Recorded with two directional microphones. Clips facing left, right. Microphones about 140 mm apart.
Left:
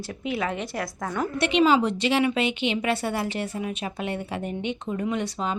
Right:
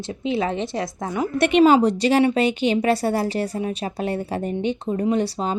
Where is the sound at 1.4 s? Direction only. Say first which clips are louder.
Right 6 dB; 50° right (ahead or behind).